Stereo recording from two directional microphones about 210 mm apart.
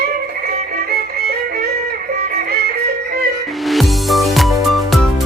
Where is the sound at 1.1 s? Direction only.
50° right (ahead or behind).